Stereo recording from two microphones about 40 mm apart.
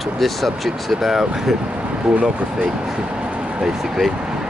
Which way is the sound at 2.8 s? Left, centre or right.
Centre.